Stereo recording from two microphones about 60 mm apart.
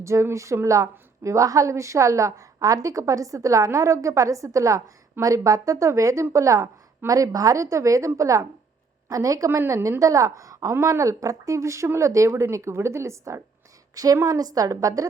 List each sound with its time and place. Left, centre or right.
0.0 s a woman's voice: right
7.1 s a woman's voice: right
9.0 s a woman's voice: right
9.5 s a woman's voice: right
10.0 s a woman's voice: right
13.9 s a woman's voice: right